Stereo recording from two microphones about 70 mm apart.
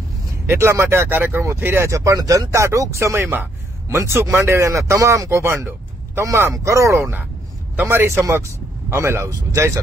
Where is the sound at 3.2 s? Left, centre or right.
Right.